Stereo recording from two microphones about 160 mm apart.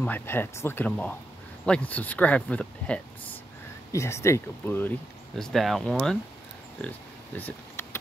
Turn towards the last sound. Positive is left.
turn(degrees=15)  # may be behind; listen again after turning